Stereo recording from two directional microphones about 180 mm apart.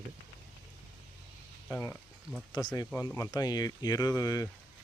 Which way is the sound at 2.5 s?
25° left (ahead or behind).